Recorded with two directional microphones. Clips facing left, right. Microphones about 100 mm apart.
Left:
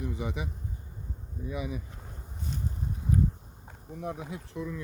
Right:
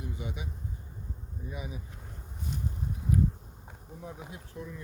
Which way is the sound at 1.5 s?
90° left.